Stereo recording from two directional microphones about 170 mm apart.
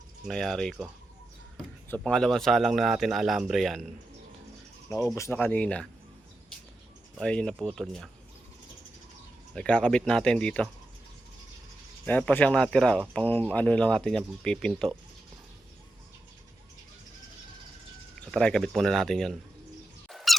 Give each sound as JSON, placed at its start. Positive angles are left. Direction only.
{"t": 0.3, "sound": "speech", "side_deg": 0}
{"t": 1.9, "sound": "speech", "side_deg": 5}
{"t": 4.9, "sound": "speech", "side_deg": 15}
{"t": 7.2, "sound": "speech", "side_deg": 5}
{"t": 9.6, "sound": "speech", "side_deg": 5}
{"t": 12.0, "sound": "speech", "side_deg": 10}
{"t": 18.3, "sound": "speech", "side_deg": 5}
{"t": 20.1, "sound": "squeak", "side_deg": 0}